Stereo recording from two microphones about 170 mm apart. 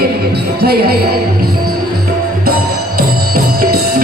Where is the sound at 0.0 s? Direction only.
70° right (ahead or behind).